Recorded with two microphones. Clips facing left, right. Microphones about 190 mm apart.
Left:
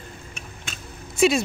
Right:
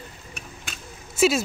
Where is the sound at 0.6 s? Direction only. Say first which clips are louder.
Left 2 dB; centre (ahead or behind).